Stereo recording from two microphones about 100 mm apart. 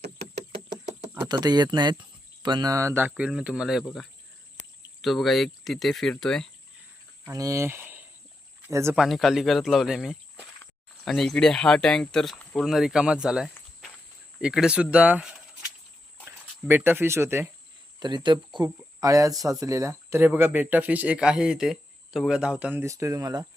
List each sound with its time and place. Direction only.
1.2 s speech: 45° right (ahead or behind); by 3.1 s 25° right (ahead or behind)
3.2 s speech: 10° right (ahead or behind)
7.3 s speech: 30° right (ahead or behind)
9.0 s speech: centre (ahead or behind); by 17.5 s 25° right (ahead or behind)
18.0 s speech: 50° right (ahead or behind)
18.9 s speech: 35° right (ahead or behind); by 22.7 s 10° right (ahead or behind)
22.7 s speech: 30° right (ahead or behind)